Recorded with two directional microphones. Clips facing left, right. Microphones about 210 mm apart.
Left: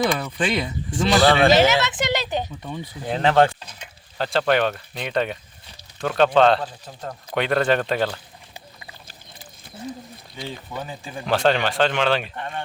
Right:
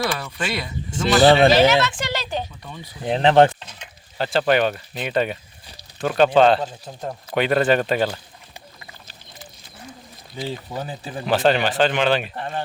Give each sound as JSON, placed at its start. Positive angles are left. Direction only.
{"t": 0.0, "sound": "speech", "side_deg": 20}
{"t": 1.2, "sound": "speech", "side_deg": -25}
{"t": 1.5, "sound": "speech", "side_deg": 20}
{"t": 3.0, "sound": "speech", "side_deg": -20}
{"t": 4.2, "sound": "speech", "side_deg": -5}
{"t": 10.8, "sound": "speech", "side_deg": -35}
{"t": 11.3, "sound": "speech", "side_deg": -5}
{"t": 12.4, "sound": "speech", "side_deg": -35}